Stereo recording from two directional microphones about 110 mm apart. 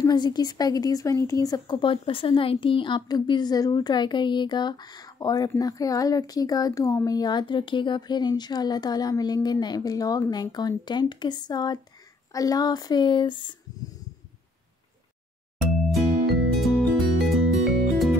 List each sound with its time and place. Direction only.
0.0 s speech: 40° left (ahead or behind)
1.8 s speech: 55° left (ahead or behind)
15.9 s music: centre (ahead or behind)